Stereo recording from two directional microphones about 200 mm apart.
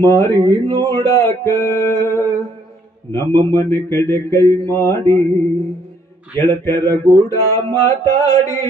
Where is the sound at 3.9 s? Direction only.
15° left (ahead or behind).